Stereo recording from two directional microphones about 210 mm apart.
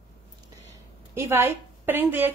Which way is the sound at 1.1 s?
10° right (ahead or behind).